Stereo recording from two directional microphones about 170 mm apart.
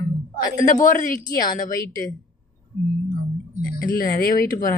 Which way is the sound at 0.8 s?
50° left (ahead or behind).